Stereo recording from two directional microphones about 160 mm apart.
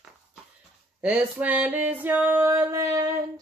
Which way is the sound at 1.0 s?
10° right (ahead or behind).